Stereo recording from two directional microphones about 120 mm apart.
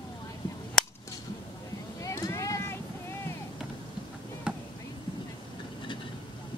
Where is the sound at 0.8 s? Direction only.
5° left (ahead or behind).